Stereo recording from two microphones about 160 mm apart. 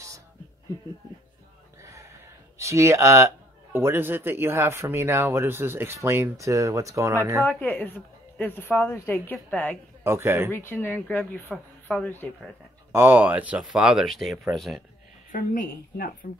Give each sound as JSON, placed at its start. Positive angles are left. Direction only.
{"t": 1.8, "sound": "a sound", "side_deg": -20}
{"t": 2.6, "sound": "a man's voice", "side_deg": -20}
{"t": 7.4, "sound": "a woman's voice", "side_deg": 10}
{"t": 10.0, "sound": "a man's voice", "side_deg": -15}
{"t": 10.5, "sound": "a woman's voice", "side_deg": 15}
{"t": 12.9, "sound": "speech", "side_deg": -10}
{"t": 15.3, "sound": "a woman's voice", "side_deg": 60}